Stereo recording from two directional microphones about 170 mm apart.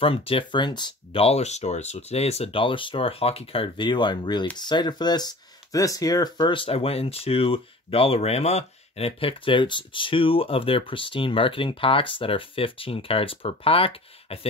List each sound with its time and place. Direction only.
0.0 s speech: 35° left (ahead or behind)